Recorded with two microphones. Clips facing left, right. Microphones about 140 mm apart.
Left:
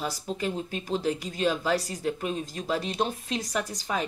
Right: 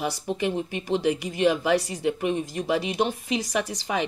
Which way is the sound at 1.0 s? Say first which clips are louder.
Right 4 dB; 75° right (ahead or behind).